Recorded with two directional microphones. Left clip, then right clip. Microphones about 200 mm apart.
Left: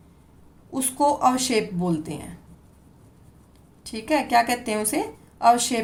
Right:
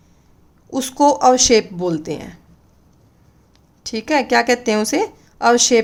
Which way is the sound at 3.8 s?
40° right (ahead or behind).